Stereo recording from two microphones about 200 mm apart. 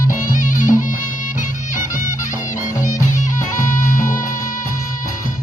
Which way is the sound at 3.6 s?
40° left (ahead or behind).